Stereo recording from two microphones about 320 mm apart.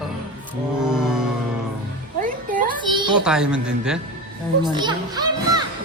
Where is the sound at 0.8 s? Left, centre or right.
Centre.